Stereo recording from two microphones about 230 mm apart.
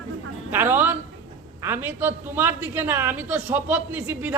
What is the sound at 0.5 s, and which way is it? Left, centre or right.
A woman's voice, centre.